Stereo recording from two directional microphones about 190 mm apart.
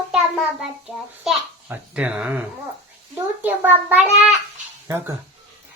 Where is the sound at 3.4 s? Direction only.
10° right (ahead or behind).